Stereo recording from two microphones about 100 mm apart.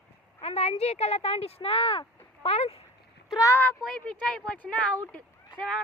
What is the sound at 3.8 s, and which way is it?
Speech, 10° left (ahead or behind).